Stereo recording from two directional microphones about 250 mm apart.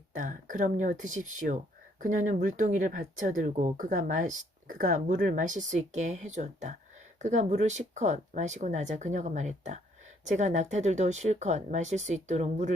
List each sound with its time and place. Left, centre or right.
0.2 s speech: right